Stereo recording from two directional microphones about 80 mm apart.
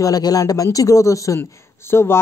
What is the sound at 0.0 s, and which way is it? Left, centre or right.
Speech, left.